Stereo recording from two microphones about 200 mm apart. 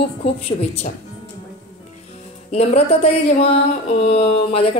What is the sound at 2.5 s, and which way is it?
A woman's voice, 30° left (ahead or behind).